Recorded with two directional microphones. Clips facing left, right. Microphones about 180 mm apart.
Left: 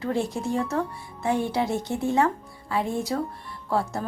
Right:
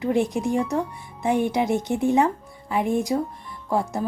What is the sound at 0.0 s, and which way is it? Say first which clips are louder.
Speech: right 4 dB; 15° right (ahead or behind).